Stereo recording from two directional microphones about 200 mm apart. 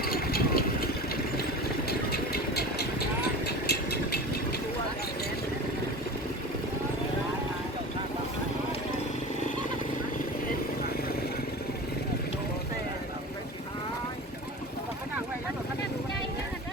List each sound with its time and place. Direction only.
0.0 s vehicle: 50° left (ahead or behind)
3.4 s engine: 55° left (ahead or behind)